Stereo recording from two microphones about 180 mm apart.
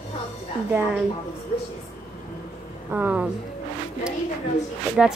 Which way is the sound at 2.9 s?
10° right (ahead or behind).